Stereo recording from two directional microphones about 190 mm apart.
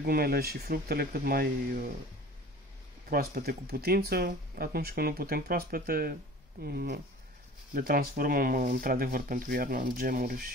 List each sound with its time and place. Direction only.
0.0 s speech: 50° right (ahead or behind)
3.1 s speech: 50° right (ahead or behind)